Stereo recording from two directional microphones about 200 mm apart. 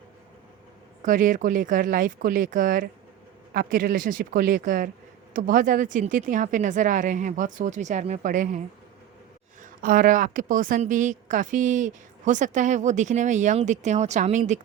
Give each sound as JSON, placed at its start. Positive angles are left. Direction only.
{"t": 1.0, "sound": "a woman's voice", "side_deg": -40}